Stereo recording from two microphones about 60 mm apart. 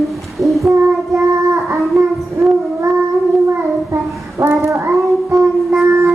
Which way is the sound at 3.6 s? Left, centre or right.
Right.